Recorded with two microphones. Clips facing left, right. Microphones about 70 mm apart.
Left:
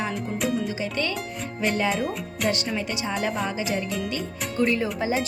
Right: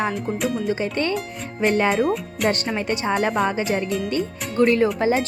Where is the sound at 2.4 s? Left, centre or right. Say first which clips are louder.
Right 4 dB; right.